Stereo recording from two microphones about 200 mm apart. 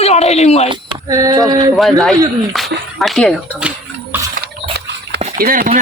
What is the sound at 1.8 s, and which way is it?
A man's voice, centre (ahead or behind).